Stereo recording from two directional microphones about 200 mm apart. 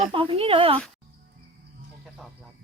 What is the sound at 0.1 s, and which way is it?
Speech, 25° right (ahead or behind).